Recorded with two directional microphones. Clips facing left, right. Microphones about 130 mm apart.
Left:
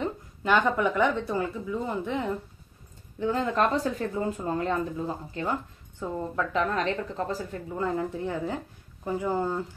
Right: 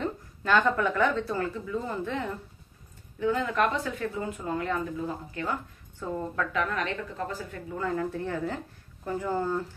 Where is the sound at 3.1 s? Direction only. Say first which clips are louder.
Left 1 dB; 35° left (ahead or behind).